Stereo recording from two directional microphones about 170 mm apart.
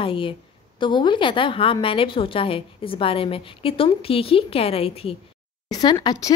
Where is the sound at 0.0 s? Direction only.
30° left (ahead or behind).